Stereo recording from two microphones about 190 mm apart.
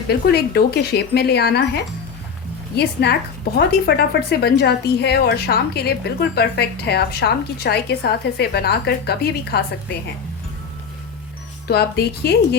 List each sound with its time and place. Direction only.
0.1 s a woman's voice: 55° left (ahead or behind)
2.7 s a woman's voice: 55° left (ahead or behind)
11.7 s a woman's voice: 60° left (ahead or behind)